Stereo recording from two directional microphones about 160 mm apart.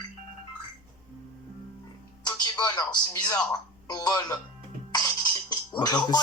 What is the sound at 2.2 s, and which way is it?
Speech, 25° left (ahead or behind).